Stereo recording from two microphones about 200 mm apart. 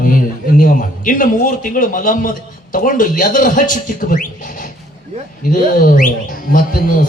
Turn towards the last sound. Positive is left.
turn(degrees=45)  # may be behind; listen again after turning